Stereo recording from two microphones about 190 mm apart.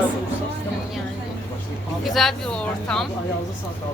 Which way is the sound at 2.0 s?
Centre (ahead or behind).